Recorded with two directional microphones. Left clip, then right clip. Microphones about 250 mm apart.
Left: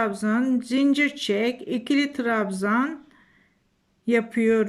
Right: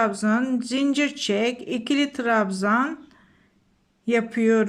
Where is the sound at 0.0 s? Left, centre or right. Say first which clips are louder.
Right 2 dB; centre.